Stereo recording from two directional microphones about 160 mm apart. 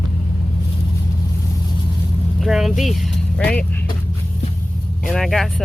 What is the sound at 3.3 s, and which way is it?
Speech, 5° left (ahead or behind).